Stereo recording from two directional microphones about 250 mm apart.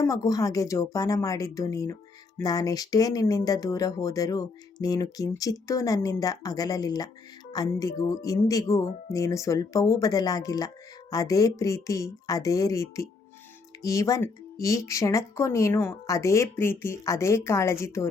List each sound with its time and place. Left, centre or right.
0.0 s speech: centre